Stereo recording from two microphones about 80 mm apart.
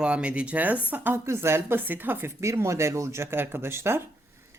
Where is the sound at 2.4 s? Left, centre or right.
Right.